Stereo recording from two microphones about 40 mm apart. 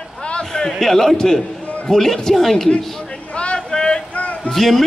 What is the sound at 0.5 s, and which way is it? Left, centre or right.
A man's voice, centre.